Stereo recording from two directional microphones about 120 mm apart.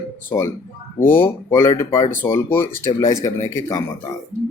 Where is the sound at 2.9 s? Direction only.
35° left (ahead or behind).